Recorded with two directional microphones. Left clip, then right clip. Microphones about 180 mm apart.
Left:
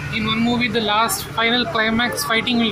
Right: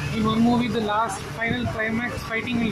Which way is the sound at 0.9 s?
20° left (ahead or behind).